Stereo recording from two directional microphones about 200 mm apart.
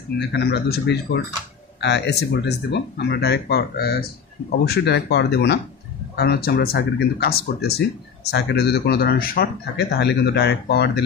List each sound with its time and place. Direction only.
0.3 s speech: 55° left (ahead or behind)